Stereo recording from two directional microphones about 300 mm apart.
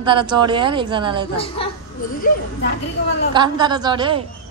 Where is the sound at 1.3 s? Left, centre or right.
Centre.